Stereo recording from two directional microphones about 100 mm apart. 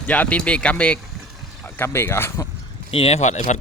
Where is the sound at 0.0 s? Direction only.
15° left (ahead or behind).